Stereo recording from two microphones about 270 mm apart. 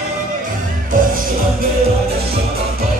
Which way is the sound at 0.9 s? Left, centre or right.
Right.